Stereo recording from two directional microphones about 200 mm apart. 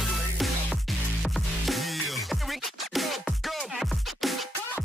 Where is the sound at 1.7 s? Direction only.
Centre (ahead or behind).